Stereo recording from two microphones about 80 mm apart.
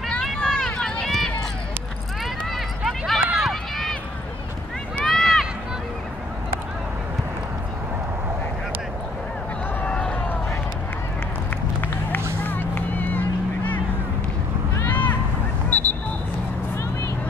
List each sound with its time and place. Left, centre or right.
0.1 s run: centre
2.5 s run: centre
5.0 s run: centre
9.8 s run: centre
12.4 s music: left
14.8 s a sound: left
15.7 s vehicle: left